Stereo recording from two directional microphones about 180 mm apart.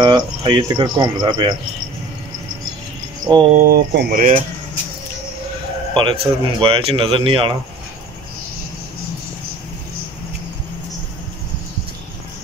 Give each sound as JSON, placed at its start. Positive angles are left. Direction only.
{"t": 0.0, "sound": "speech", "side_deg": -25}
{"t": 3.3, "sound": "speech", "side_deg": -25}
{"t": 3.5, "sound": "speech", "side_deg": -55}
{"t": 5.9, "sound": "speech", "side_deg": -30}